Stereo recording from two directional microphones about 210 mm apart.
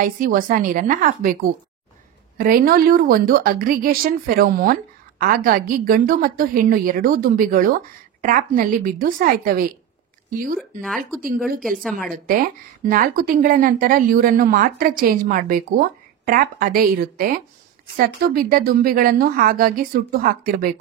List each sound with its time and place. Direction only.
0.0 s a woman's voice: 40° right (ahead or behind)
11.8 s a woman's voice: centre (ahead or behind)
12.3 s speech: 40° right (ahead or behind)